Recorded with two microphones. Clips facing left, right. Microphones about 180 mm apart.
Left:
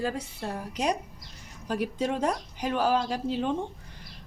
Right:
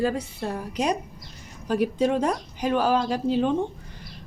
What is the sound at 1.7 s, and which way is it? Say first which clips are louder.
Speech: right 6 dB; 90° right.